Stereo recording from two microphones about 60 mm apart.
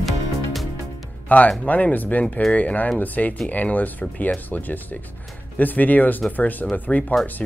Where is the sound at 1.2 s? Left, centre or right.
Left.